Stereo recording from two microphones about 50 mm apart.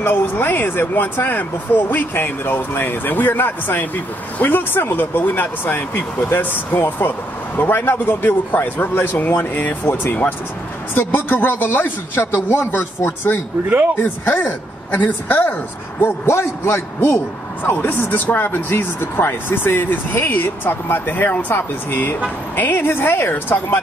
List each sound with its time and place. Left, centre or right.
0.0 s speech: left
12.3 s speech: left
16.0 s speech: left